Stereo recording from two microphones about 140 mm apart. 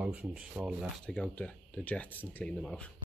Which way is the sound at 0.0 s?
10° right (ahead or behind).